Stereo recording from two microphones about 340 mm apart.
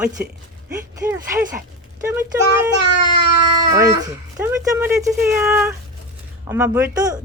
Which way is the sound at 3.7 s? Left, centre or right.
Centre.